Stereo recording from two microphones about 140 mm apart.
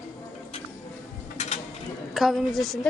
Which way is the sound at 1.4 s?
50° left (ahead or behind).